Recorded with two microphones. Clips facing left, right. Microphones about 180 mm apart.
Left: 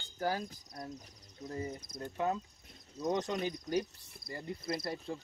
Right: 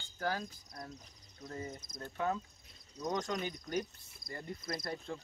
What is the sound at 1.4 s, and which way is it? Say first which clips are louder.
Cricket: left 4 dB; 30° left (ahead or behind).